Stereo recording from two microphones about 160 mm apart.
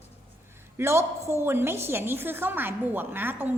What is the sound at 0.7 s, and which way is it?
A man's voice, 15° right (ahead or behind).